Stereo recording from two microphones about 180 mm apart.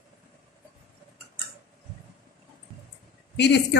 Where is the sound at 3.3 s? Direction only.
70° left (ahead or behind).